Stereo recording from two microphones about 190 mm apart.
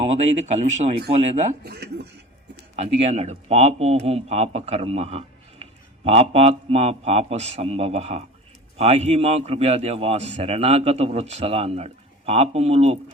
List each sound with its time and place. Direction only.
0.0 s a man's voice: 35° right (ahead or behind)
1.6 s speech: 60° right (ahead or behind)
2.7 s a man's voice: 35° right (ahead or behind)